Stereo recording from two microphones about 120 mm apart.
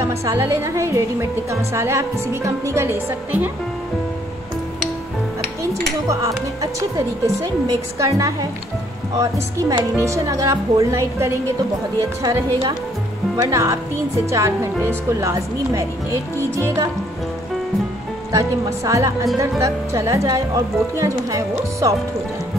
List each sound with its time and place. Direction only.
0.0 s a woman's voice: 25° right (ahead or behind)
6.0 s a woman's voice: 25° right (ahead or behind)
13.4 s a woman's voice: 25° right (ahead or behind)
18.3 s a woman's voice: 25° right (ahead or behind)